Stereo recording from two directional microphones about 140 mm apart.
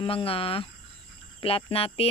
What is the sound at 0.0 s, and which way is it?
Speech, 40° left (ahead or behind).